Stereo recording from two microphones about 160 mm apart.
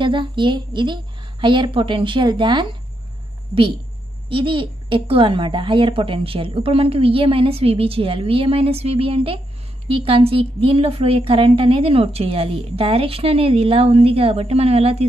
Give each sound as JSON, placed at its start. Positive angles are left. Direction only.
{"t": 0.0, "sound": "a woman's voice", "side_deg": -30}
{"t": 4.3, "sound": "a woman's voice", "side_deg": -35}